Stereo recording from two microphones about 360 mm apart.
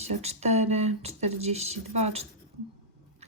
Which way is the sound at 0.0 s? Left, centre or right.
Centre.